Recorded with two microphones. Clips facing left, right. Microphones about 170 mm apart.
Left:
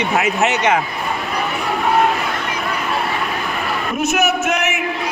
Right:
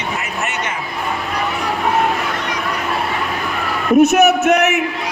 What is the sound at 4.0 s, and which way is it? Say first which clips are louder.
Speech: right 7 dB; 60° right (ahead or behind).